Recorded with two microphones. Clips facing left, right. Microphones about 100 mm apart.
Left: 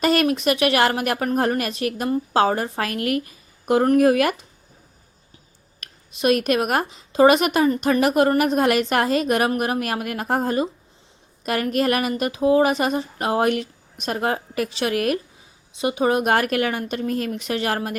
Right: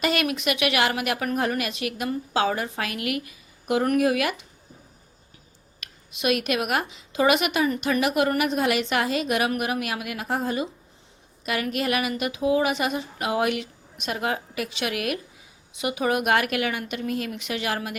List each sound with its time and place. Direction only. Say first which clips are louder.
0.0 s a woman's voice: left 6 dB; 40° left (ahead or behind)
5.8 s a woman's voice: left 5 dB; 40° left (ahead or behind)